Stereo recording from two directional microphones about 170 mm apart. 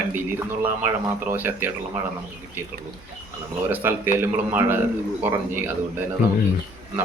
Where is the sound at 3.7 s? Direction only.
10° right (ahead or behind).